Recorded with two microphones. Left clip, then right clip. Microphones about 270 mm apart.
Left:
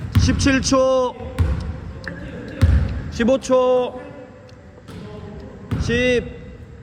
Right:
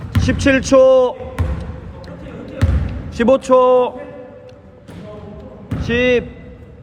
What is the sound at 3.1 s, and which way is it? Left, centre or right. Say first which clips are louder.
Speech: right 5 dB; centre.